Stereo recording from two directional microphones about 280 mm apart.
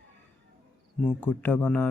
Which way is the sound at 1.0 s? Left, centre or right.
Centre.